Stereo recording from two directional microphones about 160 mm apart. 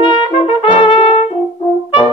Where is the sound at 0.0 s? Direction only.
30° left (ahead or behind).